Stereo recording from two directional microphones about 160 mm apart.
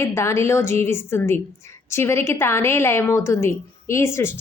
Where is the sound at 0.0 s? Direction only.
15° left (ahead or behind).